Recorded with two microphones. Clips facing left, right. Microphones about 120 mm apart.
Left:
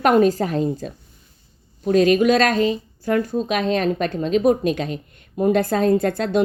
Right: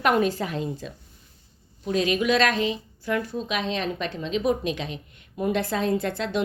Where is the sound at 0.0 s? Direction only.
40° left (ahead or behind).